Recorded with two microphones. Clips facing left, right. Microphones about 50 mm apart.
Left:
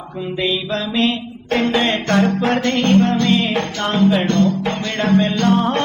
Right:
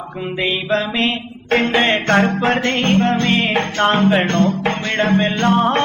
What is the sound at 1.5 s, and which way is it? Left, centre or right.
Music, right.